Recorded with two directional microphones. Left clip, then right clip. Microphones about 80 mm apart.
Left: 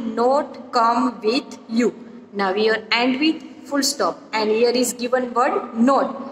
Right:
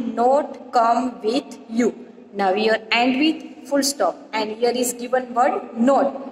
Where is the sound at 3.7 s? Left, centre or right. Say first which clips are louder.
Right 2 dB; right.